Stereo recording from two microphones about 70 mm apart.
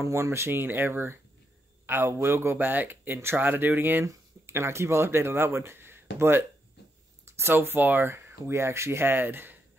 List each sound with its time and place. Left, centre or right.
0.0 s speech: right
4.0 s speech: right